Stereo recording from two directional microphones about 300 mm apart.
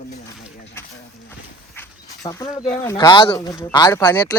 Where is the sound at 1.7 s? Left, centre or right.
Centre.